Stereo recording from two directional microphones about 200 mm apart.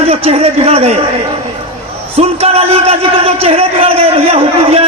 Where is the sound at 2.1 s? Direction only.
30° right (ahead or behind).